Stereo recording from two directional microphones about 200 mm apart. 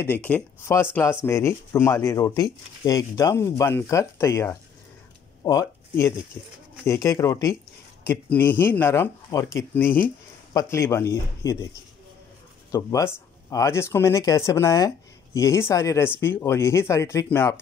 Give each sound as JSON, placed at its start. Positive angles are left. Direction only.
{"t": 0.0, "sound": "speech", "side_deg": 10}
{"t": 12.7, "sound": "speech", "side_deg": 15}